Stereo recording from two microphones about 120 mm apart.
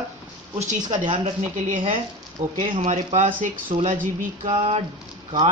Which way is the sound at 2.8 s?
80° right.